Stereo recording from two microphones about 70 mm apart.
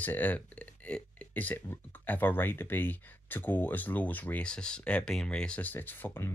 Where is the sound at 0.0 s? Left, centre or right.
Left.